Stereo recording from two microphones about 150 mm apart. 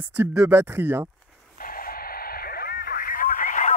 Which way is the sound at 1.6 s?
70° left (ahead or behind).